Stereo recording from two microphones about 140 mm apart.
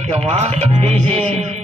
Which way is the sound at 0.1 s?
50° right (ahead or behind).